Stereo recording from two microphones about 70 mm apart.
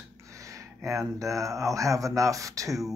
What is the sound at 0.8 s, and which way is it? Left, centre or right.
Speech, right.